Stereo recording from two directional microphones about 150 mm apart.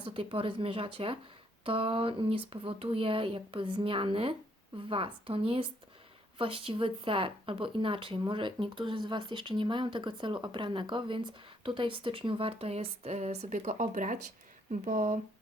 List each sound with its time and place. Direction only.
0.0 s speech: 35° right (ahead or behind); by 15.2 s 50° right (ahead or behind)